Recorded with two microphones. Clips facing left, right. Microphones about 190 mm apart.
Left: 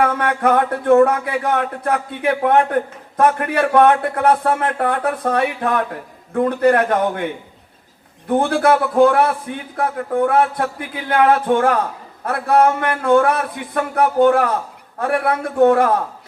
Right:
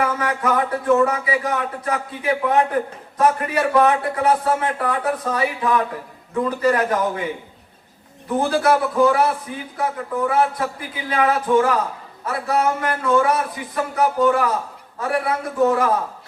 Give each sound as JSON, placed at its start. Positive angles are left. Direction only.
{"t": 0.0, "sound": "speech", "side_deg": 60}
{"t": 8.4, "sound": "speech", "side_deg": 60}